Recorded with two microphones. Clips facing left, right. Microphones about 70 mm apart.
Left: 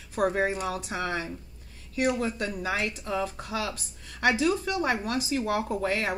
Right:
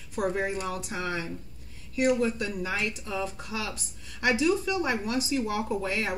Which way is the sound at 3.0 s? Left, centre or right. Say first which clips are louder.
Left 2 dB; left.